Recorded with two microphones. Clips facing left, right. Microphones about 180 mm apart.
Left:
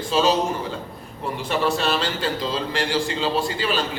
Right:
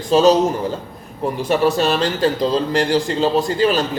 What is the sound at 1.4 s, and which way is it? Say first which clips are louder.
A man's voice: right 6 dB; 40° right (ahead or behind).